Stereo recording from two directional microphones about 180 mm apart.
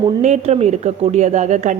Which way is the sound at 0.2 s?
35° right (ahead or behind).